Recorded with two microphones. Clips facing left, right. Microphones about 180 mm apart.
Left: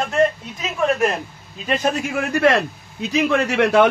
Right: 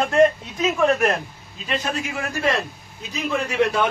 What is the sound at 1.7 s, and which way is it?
A man's voice, 50° left (ahead or behind).